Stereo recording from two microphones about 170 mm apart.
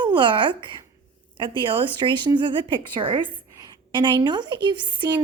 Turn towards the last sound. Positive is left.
turn(degrees=-25)  # may be behind; listen again after turning